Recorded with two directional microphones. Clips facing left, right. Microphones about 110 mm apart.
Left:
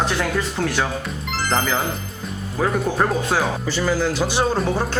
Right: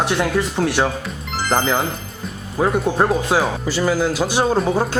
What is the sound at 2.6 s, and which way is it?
Speech, 15° right (ahead or behind).